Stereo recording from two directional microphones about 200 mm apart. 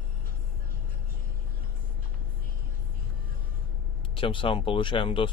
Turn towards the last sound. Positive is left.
turn(degrees=25)  # may be behind; listen again after turning